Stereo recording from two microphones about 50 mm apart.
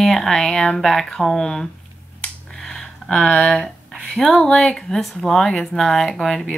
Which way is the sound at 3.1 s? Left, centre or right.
Centre.